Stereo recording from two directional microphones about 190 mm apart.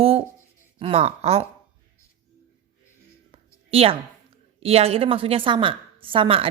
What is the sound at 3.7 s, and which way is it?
A woman's voice, 30° right (ahead or behind).